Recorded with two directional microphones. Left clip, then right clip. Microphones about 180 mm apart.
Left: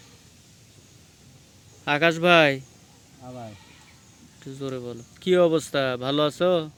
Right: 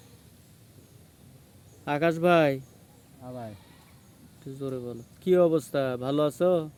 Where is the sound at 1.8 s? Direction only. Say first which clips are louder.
Left 4 dB; 5° right (ahead or behind).